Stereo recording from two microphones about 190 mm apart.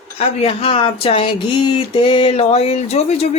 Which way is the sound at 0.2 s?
30° left (ahead or behind).